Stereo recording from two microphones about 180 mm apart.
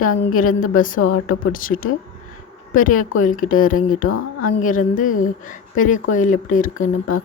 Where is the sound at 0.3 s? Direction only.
50° left (ahead or behind).